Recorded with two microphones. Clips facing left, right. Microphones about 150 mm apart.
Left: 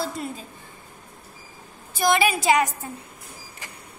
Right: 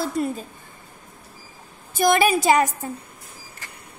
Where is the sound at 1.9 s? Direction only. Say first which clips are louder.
Right 3 dB; 50° right (ahead or behind).